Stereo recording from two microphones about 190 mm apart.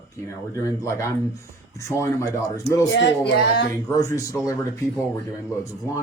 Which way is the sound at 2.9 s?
60° left (ahead or behind).